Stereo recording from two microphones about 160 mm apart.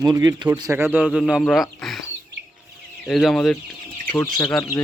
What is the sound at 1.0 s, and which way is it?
Speech, centre (ahead or behind).